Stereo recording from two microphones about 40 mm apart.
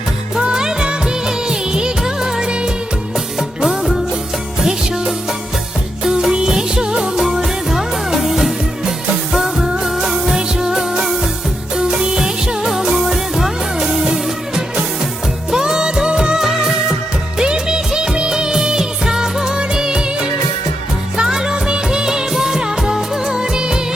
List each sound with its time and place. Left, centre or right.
0.3 s music of bollywood: centre
3.6 s music: centre
6.1 s music: centre
16.4 s music of bollywood: centre
21.2 s music of bollywood: centre